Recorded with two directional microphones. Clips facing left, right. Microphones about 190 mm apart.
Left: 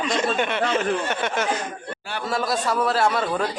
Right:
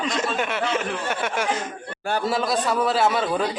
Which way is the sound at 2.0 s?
50° right (ahead or behind).